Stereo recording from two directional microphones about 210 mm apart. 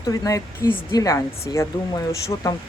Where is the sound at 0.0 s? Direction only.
15° left (ahead or behind).